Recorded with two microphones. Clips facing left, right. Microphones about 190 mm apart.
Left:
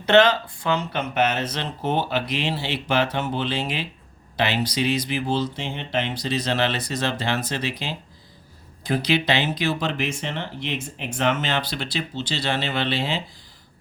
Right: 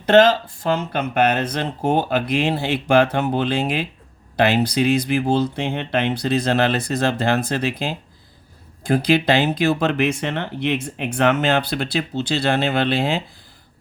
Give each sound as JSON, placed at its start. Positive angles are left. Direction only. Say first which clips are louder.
{"t": 0.0, "sound": "speech", "louder": "right 3 dB", "side_deg": -45}